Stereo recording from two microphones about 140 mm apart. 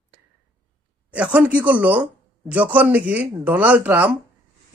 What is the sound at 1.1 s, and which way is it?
Speech, 10° right (ahead or behind).